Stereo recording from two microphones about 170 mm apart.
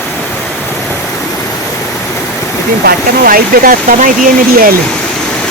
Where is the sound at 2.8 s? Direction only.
60° right (ahead or behind).